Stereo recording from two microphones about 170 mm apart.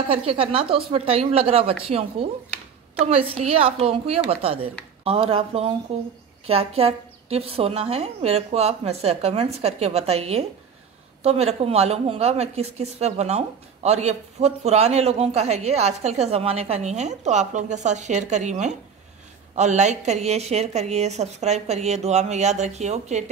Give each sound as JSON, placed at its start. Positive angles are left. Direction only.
{"t": 0.1, "sound": "a woman's voice", "side_deg": -35}